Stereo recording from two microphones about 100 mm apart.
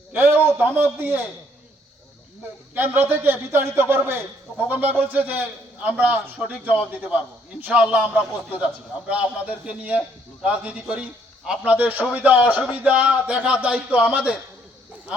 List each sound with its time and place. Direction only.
0.1 s a man's voice: 20° right (ahead or behind)
2.7 s a man's voice: 20° right (ahead or behind)